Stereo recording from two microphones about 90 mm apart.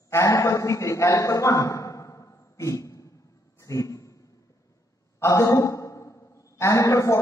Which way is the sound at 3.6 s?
35° left (ahead or behind).